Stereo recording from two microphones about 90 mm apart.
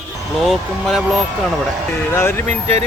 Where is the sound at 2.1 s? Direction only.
25° left (ahead or behind).